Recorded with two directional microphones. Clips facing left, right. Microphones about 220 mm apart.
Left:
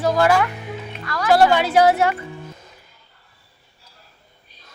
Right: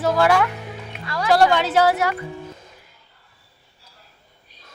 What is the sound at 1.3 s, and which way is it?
Speech, 5° left (ahead or behind).